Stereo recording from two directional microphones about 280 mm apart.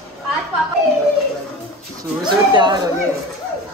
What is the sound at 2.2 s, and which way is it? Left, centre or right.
Speech, centre.